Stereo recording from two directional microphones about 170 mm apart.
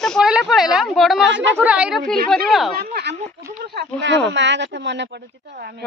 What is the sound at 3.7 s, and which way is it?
Speech, 90° right.